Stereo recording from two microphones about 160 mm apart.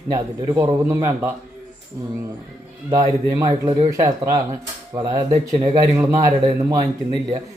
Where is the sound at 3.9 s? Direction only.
20° right (ahead or behind).